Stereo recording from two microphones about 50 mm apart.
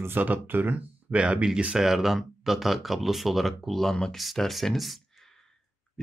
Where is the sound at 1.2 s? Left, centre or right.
Right.